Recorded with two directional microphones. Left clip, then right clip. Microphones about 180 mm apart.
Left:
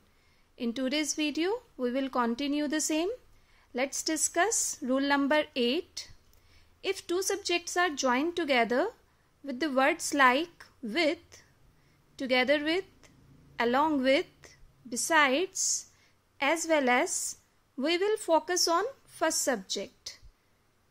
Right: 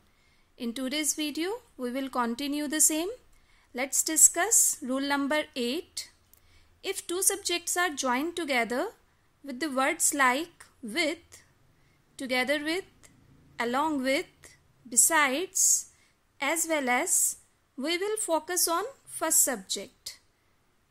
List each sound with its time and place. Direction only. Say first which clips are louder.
0.6 s a woman's voice: left 1 dB; 10° left (ahead or behind)